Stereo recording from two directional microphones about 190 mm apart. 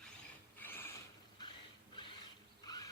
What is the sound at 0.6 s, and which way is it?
Mechanisms, 10° left (ahead or behind).